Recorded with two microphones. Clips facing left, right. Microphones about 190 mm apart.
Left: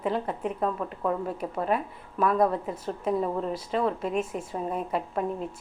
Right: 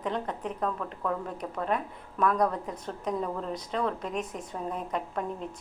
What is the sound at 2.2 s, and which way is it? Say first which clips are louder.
A woman's voice: left 3 dB; 5° left (ahead or behind).